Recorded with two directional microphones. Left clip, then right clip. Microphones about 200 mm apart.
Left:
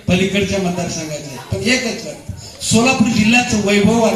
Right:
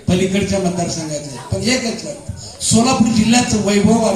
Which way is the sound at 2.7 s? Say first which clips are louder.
Left 1 dB; 25° right (ahead or behind).